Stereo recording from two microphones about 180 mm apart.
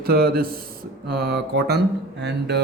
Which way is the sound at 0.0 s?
55° right (ahead or behind).